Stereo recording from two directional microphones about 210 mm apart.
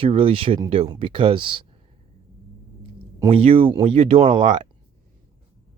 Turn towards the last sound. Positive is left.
turn(degrees=-25)  # may be behind; listen again after turning